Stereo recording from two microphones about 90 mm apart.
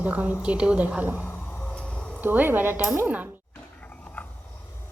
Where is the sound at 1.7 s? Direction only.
10° left (ahead or behind).